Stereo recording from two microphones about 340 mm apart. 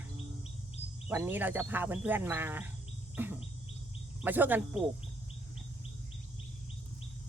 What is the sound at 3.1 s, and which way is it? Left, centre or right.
Bird, centre.